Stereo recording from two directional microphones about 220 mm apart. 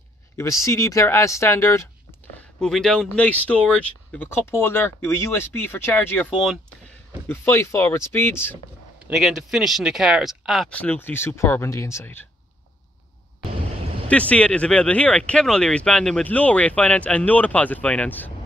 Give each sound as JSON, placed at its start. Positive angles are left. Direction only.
{"t": 0.4, "sound": "speech", "side_deg": 15}
{"t": 2.6, "sound": "speech", "side_deg": 0}
{"t": 9.0, "sound": "speech", "side_deg": 0}
{"t": 14.0, "sound": "speech", "side_deg": 5}